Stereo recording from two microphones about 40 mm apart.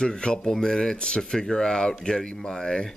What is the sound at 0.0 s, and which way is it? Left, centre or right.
Speech, left.